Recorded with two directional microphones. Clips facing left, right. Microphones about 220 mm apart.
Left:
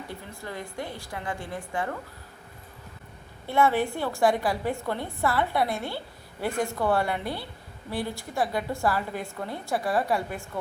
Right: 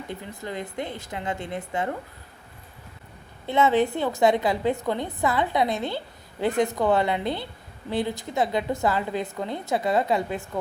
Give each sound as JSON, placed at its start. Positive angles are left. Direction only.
{"t": 0.1, "sound": "a woman's voice", "side_deg": -20}
{"t": 3.4, "sound": "a woman's voice", "side_deg": -20}